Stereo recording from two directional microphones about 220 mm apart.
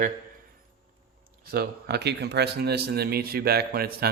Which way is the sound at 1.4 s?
45° right (ahead or behind).